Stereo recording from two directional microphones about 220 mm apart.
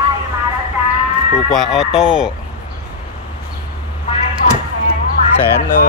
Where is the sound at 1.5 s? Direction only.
Centre (ahead or behind).